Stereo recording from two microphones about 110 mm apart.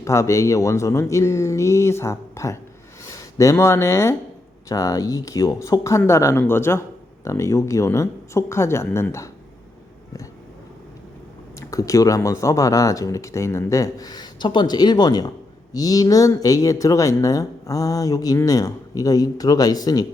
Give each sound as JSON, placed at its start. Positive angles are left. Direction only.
{"t": 0.0, "sound": "speech", "side_deg": 25}
{"t": 11.6, "sound": "speech", "side_deg": 30}